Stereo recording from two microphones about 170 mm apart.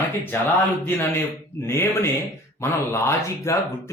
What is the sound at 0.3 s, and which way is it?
Speech, 10° left (ahead or behind).